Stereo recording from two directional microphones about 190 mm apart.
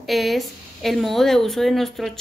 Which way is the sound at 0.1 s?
Centre (ahead or behind).